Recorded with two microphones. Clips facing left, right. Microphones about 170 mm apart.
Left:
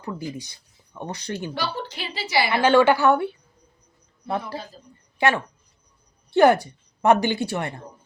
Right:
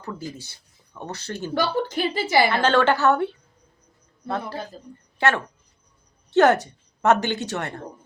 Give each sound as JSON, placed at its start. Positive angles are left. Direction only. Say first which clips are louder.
{"t": 0.0, "sound": "speech", "louder": "left 2 dB", "side_deg": 15}
{"t": 1.5, "sound": "a woman's voice", "louder": "right 6 dB", "side_deg": -50}
{"t": 2.5, "sound": "a woman's voice", "louder": "left 2 dB", "side_deg": 10}
{"t": 5.1, "sound": "a woman's voice", "louder": "left 1 dB", "side_deg": 10}